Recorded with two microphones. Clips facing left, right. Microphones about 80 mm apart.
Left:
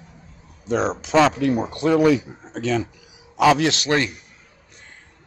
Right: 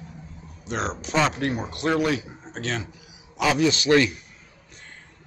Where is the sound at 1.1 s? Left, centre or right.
Left.